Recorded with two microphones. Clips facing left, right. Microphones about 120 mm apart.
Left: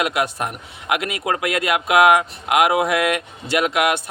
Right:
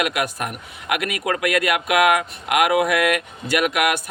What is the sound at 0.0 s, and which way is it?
Speech, 25° left (ahead or behind).